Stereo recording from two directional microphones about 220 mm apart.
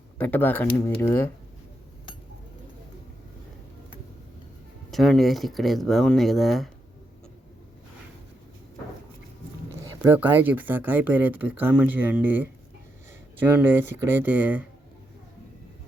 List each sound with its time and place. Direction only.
0.2 s speech: 10° left (ahead or behind)
4.9 s speech: centre (ahead or behind)
9.8 s speech: 10° right (ahead or behind)